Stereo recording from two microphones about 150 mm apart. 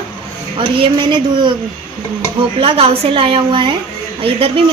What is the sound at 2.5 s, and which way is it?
Speech, 40° right (ahead or behind).